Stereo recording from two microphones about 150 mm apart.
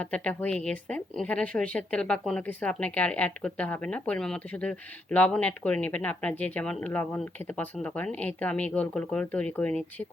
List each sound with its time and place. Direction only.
0.0 s a woman's voice: 10° left (ahead or behind)